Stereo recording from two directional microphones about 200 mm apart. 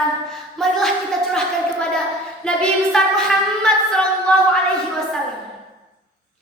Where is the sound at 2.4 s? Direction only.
5° left (ahead or behind).